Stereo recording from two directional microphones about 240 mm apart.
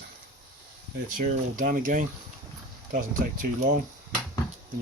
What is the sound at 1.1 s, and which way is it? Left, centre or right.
Speech, right.